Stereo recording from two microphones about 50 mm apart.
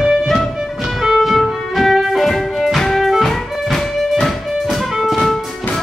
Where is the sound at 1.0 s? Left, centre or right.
Centre.